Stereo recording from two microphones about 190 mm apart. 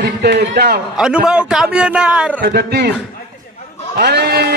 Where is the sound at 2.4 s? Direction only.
60° right (ahead or behind).